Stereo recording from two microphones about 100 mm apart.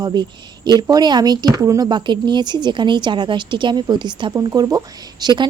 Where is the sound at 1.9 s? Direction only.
50° right (ahead or behind).